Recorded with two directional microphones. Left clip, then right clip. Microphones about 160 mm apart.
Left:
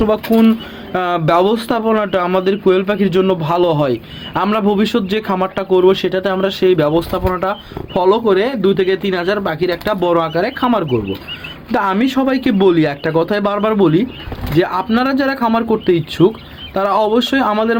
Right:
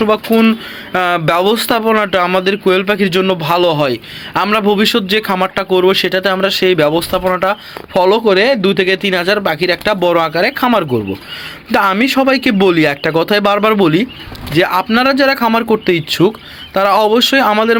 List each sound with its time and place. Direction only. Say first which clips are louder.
0.0 s speech: right 2 dB; 10° right (ahead or behind)